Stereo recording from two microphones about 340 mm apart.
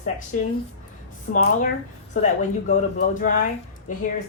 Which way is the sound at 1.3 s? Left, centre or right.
Left.